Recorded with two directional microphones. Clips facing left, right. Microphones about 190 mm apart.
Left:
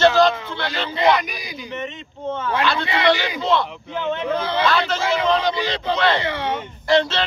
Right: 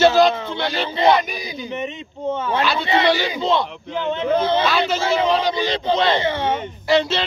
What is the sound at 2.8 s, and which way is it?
Speech, 25° right (ahead or behind).